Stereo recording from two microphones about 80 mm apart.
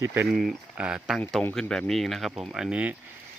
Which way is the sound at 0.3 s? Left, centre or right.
Centre.